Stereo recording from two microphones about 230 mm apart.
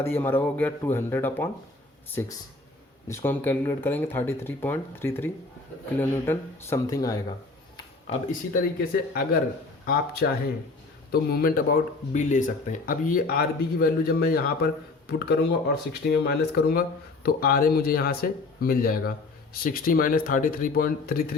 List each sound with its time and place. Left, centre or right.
0.0 s speech: centre
3.1 s speech: centre
8.0 s speech: left
9.8 s speech: left